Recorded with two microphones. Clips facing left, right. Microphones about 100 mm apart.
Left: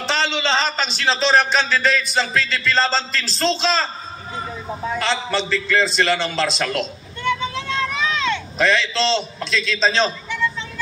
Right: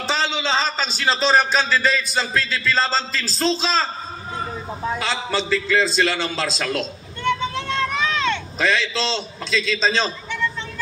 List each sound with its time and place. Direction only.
0.1 s a man's voice: 5° right (ahead or behind)
4.9 s a man's voice: 10° right (ahead or behind)
7.2 s a sound: 50° right (ahead or behind)
8.5 s a man's voice: 5° right (ahead or behind)